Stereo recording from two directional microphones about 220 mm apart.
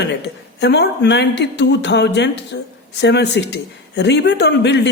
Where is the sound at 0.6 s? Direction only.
50° left (ahead or behind).